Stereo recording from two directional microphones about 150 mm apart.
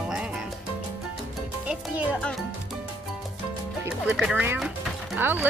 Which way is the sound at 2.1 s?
5° left (ahead or behind).